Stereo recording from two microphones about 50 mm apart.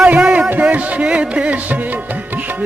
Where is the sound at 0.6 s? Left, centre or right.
Right.